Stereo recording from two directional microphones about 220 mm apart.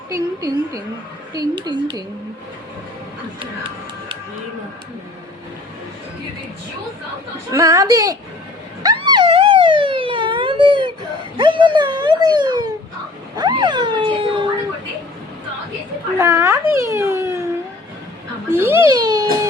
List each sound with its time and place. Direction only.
0.1 s a woman's voice: 15° right (ahead or behind)
7.5 s a woman's voice: 15° right (ahead or behind)
8.8 s police car: 20° right (ahead or behind)
11.3 s speech: 20° right (ahead or behind)
16.1 s a child's voice: 15° right (ahead or behind)
18.5 s a woman's voice: 10° right (ahead or behind)